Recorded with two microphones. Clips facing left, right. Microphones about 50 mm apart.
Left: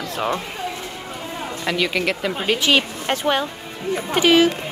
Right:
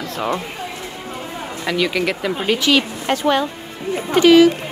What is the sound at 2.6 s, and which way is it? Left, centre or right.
Speech, left.